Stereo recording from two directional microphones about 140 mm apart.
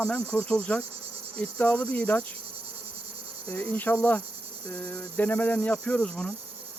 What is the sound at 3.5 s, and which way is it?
Cricket, 15° left (ahead or behind).